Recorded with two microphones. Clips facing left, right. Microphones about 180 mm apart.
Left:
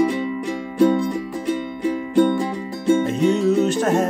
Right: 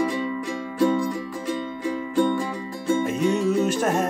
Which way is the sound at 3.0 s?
10° right (ahead or behind).